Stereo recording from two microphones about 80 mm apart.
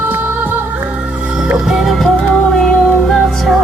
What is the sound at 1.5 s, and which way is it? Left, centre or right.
Music, centre.